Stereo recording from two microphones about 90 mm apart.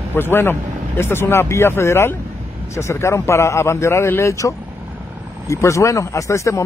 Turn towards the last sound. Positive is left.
turn(degrees=35)  # may be behind; listen again after turning